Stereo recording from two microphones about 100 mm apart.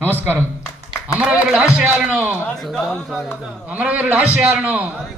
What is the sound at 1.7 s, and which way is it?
A man's voice, 5° right (ahead or behind).